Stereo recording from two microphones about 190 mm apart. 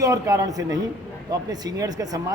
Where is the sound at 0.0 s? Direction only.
15° right (ahead or behind).